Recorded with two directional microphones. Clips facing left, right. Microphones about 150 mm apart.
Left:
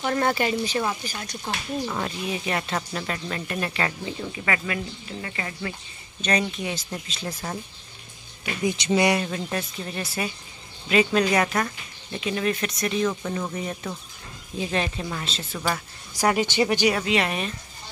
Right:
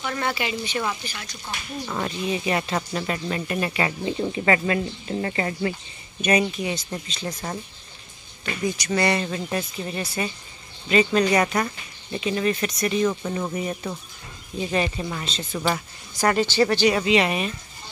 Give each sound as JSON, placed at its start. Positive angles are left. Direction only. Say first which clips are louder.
{"t": 0.0, "sound": "speech", "louder": "left 4 dB", "side_deg": 40}
{"t": 1.9, "sound": "speech", "louder": "right 2 dB", "side_deg": 0}
{"t": 4.0, "sound": "speech", "louder": "right 7 dB", "side_deg": -30}
{"t": 6.2, "sound": "speech", "louder": "right 4 dB", "side_deg": -10}
{"t": 8.6, "sound": "speech", "louder": "left 2 dB", "side_deg": 15}
{"t": 9.2, "sound": "speech", "louder": "right 1 dB", "side_deg": 0}
{"t": 16.9, "sound": "speech", "louder": "right 4 dB", "side_deg": 0}